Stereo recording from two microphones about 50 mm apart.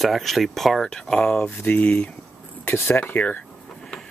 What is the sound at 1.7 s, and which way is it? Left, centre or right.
Speech, left.